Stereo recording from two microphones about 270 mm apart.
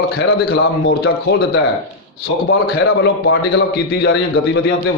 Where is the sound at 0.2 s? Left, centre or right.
Left.